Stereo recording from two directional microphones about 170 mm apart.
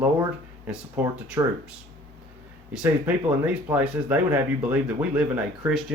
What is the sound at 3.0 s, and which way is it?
Speech, 10° right (ahead or behind).